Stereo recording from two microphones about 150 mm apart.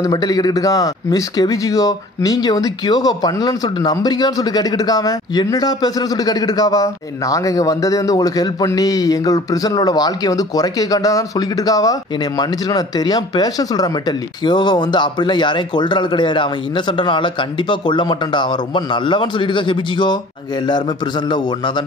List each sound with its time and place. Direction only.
0.0 s a man's voice: 25° left (ahead or behind)
21.3 s a man's voice: 30° left (ahead or behind)